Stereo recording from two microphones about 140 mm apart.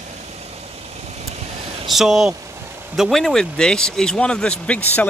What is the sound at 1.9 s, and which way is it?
Speech, centre (ahead or behind).